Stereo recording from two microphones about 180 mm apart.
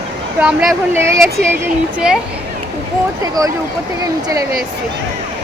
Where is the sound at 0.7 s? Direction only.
15° right (ahead or behind).